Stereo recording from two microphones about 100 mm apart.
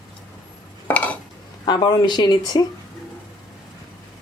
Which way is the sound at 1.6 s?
50° left (ahead or behind).